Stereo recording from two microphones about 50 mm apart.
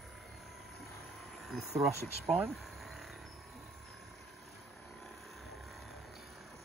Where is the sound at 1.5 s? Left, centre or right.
Centre.